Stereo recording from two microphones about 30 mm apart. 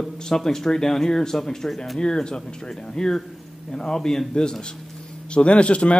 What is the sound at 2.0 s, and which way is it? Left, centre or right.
Speech, left.